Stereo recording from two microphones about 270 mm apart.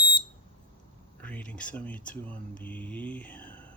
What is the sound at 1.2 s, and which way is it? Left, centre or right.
Speech, centre.